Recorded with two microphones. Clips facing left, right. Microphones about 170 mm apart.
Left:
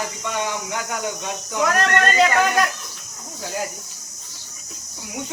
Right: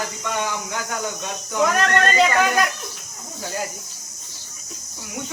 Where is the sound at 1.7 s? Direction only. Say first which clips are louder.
Left 3 dB; centre (ahead or behind).